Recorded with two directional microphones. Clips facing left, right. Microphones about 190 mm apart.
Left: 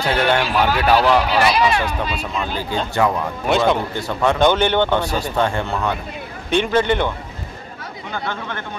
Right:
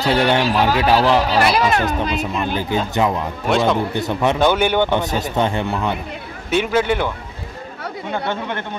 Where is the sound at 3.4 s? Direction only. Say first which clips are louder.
Even; centre (ahead or behind).